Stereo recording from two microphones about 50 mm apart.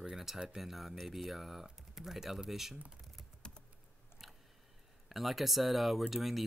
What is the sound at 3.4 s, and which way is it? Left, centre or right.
Typing, centre.